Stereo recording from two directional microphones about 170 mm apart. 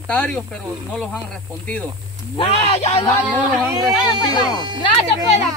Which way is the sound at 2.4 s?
35° left (ahead or behind).